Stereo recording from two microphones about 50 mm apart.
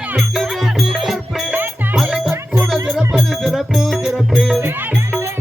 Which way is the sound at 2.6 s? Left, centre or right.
Centre.